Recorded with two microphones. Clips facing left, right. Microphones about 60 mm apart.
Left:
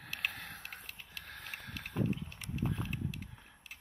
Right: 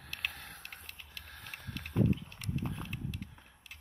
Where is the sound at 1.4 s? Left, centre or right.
Centre.